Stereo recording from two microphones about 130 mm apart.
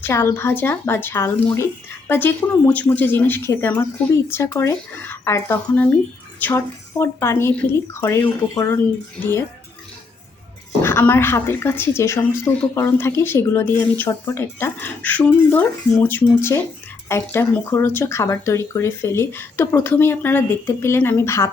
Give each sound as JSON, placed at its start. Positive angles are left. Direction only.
{"t": 0.0, "sound": "a woman's voice", "side_deg": 20}
{"t": 10.8, "sound": "a woman's voice", "side_deg": 15}